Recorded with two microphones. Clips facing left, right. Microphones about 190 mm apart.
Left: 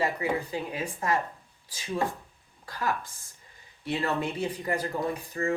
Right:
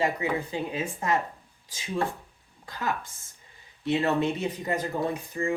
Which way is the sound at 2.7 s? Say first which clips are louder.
Even; 20° right (ahead or behind).